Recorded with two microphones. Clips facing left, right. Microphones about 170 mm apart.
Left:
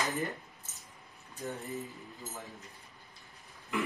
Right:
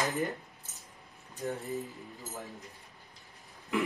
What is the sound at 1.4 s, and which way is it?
Speech, centre (ahead or behind).